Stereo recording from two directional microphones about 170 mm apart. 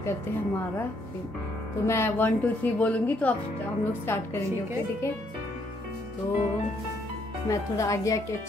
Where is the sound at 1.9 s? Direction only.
15° left (ahead or behind).